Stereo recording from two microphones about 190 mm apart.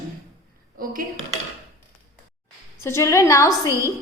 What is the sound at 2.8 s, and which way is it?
Speech, 15° left (ahead or behind).